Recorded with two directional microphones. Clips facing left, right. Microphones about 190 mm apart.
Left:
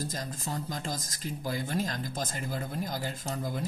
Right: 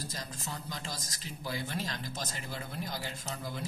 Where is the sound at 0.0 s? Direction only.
50° left (ahead or behind).